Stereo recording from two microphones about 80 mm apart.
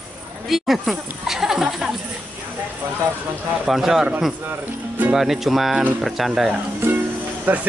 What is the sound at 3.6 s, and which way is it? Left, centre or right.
Speech, centre.